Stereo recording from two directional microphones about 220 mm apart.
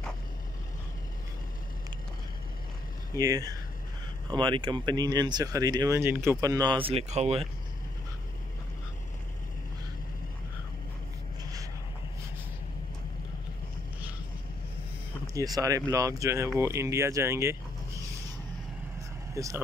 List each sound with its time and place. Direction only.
3.2 s speech: 15° right (ahead or behind)
15.3 s speech: 15° right (ahead or behind)
19.3 s speech: 15° right (ahead or behind)